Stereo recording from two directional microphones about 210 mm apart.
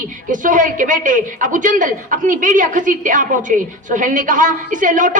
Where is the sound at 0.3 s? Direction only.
40° right (ahead or behind).